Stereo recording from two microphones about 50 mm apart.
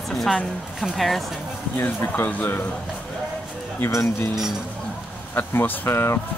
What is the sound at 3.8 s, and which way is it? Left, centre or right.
Speech, left.